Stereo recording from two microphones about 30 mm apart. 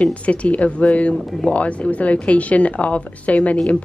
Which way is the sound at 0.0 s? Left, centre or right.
Left.